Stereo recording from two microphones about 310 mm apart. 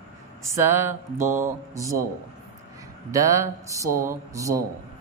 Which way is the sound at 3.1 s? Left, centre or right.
Centre.